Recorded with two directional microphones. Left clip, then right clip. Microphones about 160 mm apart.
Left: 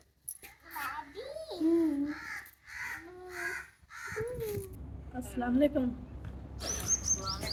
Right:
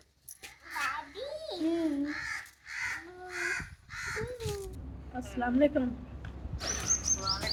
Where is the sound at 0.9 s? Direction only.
20° right (ahead or behind).